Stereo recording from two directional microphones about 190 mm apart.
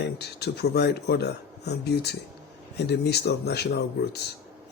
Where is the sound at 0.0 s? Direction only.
60° left (ahead or behind).